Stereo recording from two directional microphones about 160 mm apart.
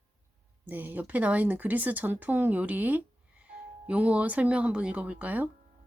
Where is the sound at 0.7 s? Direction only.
10° right (ahead or behind).